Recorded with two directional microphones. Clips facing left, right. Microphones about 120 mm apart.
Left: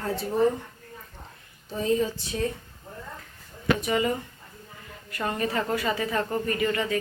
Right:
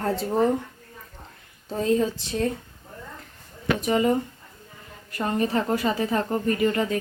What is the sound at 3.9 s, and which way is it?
Speech, 40° right (ahead or behind).